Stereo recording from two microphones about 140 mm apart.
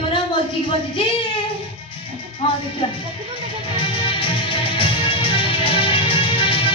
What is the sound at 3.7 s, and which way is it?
Music, 35° left (ahead or behind).